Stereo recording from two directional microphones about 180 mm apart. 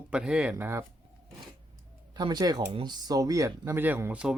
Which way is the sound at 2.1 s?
25° right (ahead or behind).